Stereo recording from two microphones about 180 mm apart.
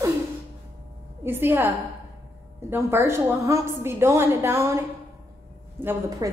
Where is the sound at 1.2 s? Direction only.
10° right (ahead or behind).